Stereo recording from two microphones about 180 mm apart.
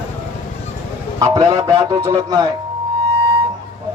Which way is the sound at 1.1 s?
25° right (ahead or behind).